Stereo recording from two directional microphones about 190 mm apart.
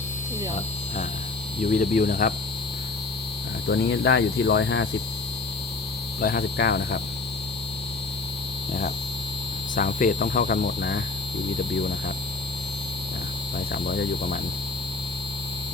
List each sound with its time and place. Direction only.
1.7 s speech: 45° left (ahead or behind)
3.7 s cricket: 65° left (ahead or behind)
6.1 s cricket: 55° left (ahead or behind)
9.7 s speech: 45° left (ahead or behind)
13.7 s speech: 50° left (ahead or behind)